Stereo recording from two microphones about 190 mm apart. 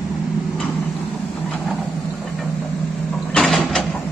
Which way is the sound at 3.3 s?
5° left (ahead or behind).